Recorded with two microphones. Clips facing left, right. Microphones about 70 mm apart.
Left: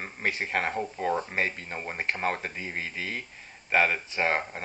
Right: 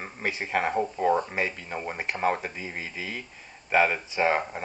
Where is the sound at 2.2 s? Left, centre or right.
Centre.